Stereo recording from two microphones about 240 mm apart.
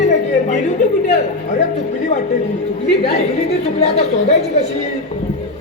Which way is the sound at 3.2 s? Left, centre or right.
Left.